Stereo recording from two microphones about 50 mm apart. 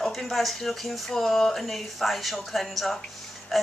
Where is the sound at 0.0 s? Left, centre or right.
Centre.